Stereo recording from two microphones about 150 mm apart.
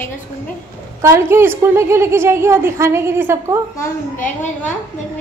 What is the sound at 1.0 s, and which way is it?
Speech, 15° right (ahead or behind).